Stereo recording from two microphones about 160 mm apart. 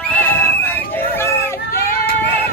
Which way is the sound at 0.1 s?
10° left (ahead or behind).